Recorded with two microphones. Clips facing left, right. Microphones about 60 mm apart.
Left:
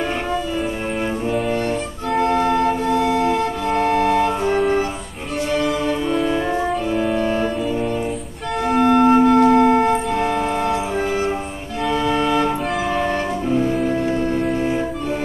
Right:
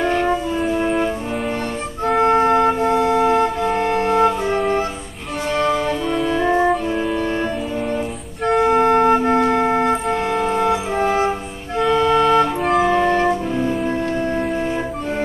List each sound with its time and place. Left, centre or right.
2.2 s organ: right
3.8 s music: right
5.6 s music: centre
8.5 s music: right
10.0 s organ: centre
11.0 s music: right
11.8 s music: centre